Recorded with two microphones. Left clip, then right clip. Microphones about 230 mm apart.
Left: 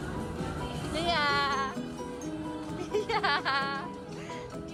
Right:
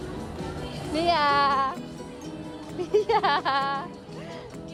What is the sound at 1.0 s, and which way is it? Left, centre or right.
Music, right.